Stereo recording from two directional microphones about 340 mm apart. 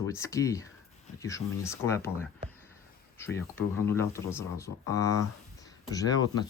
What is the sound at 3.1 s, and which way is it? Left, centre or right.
Speech, centre.